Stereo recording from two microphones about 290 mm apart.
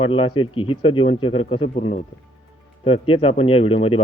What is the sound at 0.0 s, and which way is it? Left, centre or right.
Speech, centre.